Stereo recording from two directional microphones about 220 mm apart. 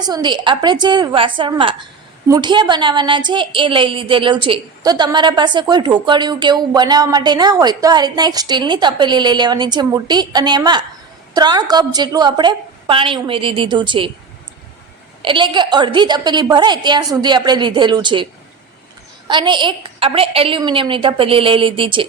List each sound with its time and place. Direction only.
0.0 s a woman's voice: 20° right (ahead or behind)
15.2 s a woman's voice: 20° right (ahead or behind)
19.3 s a woman's voice: 20° right (ahead or behind)